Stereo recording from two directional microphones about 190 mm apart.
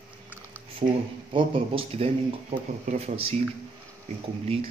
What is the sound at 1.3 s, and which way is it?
Speech, 25° right (ahead or behind).